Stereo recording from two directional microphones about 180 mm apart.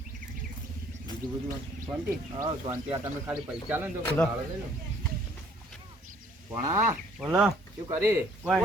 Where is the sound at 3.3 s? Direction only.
10° right (ahead or behind).